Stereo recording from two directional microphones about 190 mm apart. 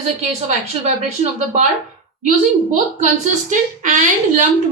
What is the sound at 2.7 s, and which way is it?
A woman's voice, 40° right (ahead or behind).